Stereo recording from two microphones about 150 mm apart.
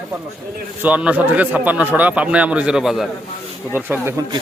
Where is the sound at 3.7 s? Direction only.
10° right (ahead or behind).